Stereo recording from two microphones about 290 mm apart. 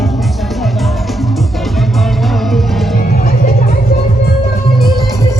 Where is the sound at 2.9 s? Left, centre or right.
Left.